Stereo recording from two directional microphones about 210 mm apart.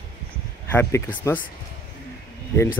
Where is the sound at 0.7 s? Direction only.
10° left (ahead or behind).